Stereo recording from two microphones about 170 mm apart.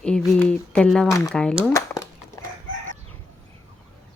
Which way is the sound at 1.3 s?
5° left (ahead or behind).